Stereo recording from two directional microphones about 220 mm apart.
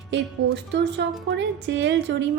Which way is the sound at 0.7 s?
50° right (ahead or behind).